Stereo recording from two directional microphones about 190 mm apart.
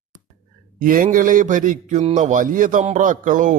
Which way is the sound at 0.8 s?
45° right (ahead or behind).